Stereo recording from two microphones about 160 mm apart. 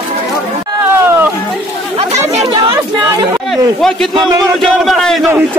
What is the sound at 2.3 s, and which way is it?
Speech, 35° right (ahead or behind).